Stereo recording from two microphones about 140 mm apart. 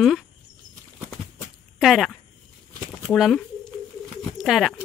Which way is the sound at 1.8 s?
Centre (ahead or behind).